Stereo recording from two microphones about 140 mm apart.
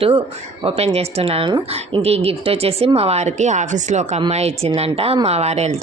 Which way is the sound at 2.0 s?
45° right (ahead or behind).